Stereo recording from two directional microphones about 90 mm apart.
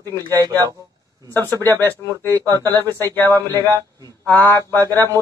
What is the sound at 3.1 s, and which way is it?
Speech, 25° left (ahead or behind).